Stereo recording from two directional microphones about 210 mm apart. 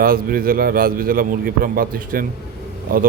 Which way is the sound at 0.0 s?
45° right (ahead or behind).